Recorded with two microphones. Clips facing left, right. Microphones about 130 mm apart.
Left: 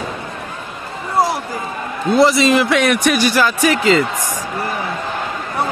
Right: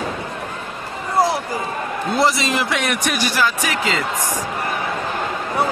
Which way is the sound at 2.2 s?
90° left.